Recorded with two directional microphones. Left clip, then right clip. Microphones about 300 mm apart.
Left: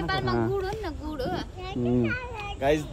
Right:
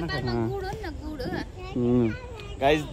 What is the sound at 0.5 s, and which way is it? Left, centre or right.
Speech, left.